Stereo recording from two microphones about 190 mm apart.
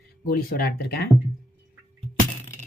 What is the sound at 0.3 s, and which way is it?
Speech, 55° left (ahead or behind).